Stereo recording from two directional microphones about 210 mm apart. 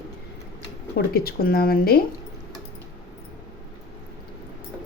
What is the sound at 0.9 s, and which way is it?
A woman's voice, 45° left (ahead or behind).